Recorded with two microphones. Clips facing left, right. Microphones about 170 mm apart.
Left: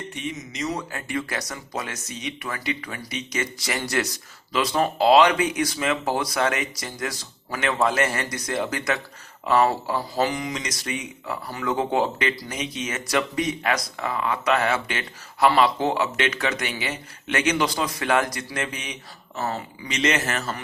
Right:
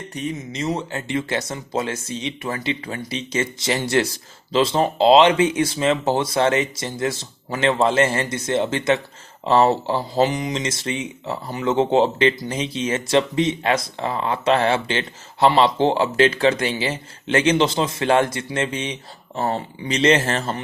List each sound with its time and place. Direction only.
0.1 s speech: 40° right (ahead or behind)